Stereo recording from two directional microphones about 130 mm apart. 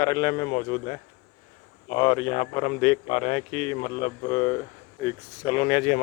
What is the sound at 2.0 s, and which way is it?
A man's voice, 40° left (ahead or behind).